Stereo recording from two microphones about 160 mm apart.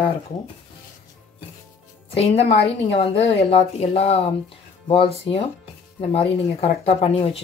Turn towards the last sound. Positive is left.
turn(degrees=35)  # may be behind; listen again after turning